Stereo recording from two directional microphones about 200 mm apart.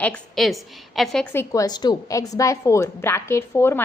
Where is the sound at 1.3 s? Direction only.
15° left (ahead or behind).